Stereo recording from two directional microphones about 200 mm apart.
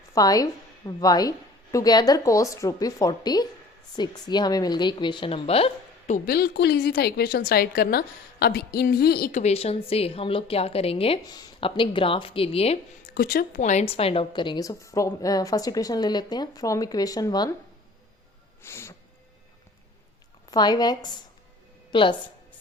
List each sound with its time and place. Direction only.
0.1 s a woman's voice: 20° left (ahead or behind); by 9.4 s 50° left (ahead or behind)
9.4 s a woman's voice: 30° left (ahead or behind)
13.1 s a woman's voice: 45° left (ahead or behind); by 17.5 s 20° left (ahead or behind)
18.6 s a sound: 15° left (ahead or behind)
20.5 s a woman's voice: 20° left (ahead or behind)